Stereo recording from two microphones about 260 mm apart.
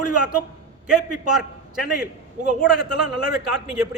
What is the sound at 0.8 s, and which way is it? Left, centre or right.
Speech, centre.